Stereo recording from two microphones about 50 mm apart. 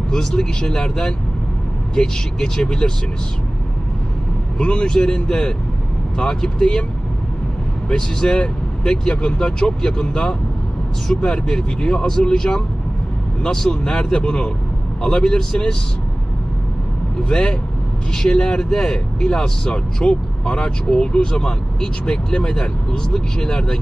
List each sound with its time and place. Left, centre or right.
0.1 s speech: centre
4.6 s speech: centre
7.9 s speech: centre
17.2 s speech: centre